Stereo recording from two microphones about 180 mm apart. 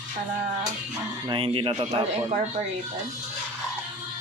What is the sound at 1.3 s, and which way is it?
Speech, 30° right (ahead or behind).